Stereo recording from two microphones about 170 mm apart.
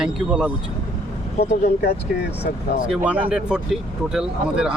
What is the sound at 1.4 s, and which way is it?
Speech, 40° left (ahead or behind).